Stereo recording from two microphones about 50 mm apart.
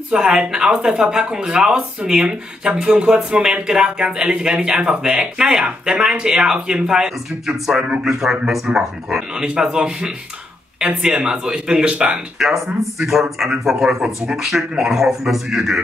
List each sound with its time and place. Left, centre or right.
0.1 s speech: centre
11.1 s speech: right
12.4 s speech: centre